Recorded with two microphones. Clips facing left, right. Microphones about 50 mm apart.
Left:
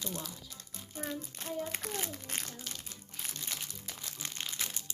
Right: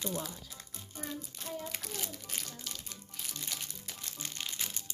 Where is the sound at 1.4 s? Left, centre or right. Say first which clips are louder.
Left 4 dB; left.